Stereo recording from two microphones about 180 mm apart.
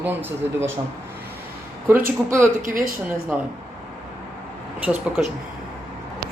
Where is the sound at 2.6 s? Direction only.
50° right (ahead or behind).